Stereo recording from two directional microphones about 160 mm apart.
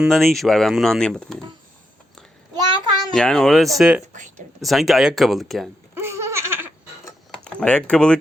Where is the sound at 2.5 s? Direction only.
30° right (ahead or behind).